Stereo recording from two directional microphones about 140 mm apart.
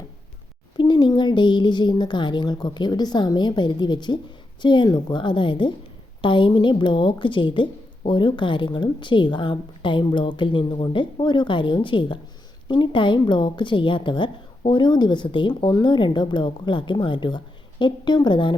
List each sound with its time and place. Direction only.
0.8 s a woman's voice: 35° left (ahead or behind)